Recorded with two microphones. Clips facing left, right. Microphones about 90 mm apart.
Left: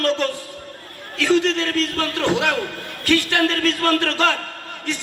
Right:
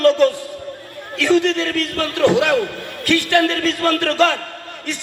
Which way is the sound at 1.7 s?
20° left (ahead or behind).